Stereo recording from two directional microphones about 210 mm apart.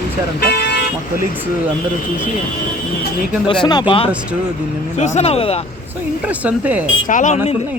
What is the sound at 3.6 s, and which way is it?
Speech, 20° left (ahead or behind).